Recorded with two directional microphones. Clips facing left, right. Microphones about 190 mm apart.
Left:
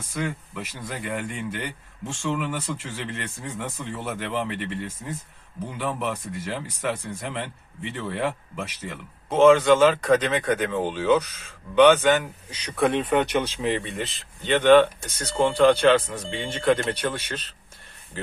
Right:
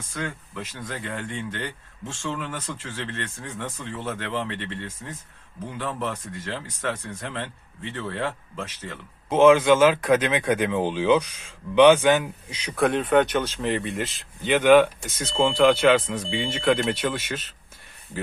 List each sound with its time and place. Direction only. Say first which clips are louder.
0.1 s speech: left 3 dB; 10° left (ahead or behind)
9.3 s speech: even; 10° right (ahead or behind)
12.7 s speech: right 2 dB; centre (ahead or behind)